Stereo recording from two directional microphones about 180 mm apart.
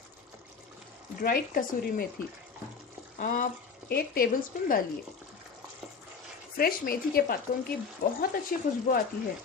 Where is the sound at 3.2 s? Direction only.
45° left (ahead or behind).